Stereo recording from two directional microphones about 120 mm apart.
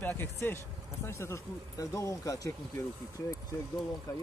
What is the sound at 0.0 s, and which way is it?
Speech, 15° left (ahead or behind).